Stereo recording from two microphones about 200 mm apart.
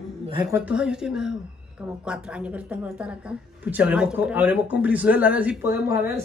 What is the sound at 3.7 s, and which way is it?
Speech, 5° right (ahead or behind).